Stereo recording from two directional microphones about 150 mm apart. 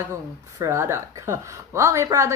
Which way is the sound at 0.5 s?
20° right (ahead or behind).